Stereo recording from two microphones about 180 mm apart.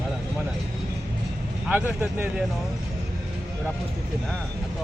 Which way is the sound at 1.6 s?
10° right (ahead or behind).